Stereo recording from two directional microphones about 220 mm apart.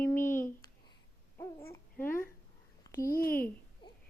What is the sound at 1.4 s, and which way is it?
Babbling, 10° left (ahead or behind).